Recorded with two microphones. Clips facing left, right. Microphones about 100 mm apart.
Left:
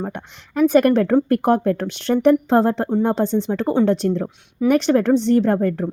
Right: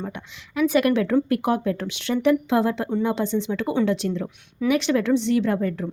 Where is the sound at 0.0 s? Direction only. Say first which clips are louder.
Left 5 dB; 50° left (ahead or behind).